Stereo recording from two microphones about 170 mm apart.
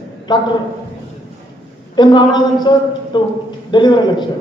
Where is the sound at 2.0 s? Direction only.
25° left (ahead or behind).